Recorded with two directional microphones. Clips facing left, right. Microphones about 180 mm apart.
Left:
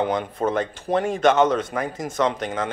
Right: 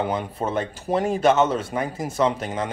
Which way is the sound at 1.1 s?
5° right (ahead or behind).